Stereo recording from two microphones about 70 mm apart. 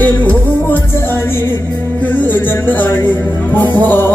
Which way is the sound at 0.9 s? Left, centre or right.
Left.